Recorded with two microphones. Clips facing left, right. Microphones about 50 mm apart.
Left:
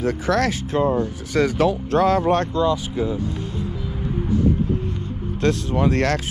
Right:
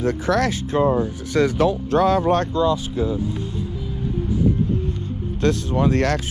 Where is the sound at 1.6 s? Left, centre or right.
Left.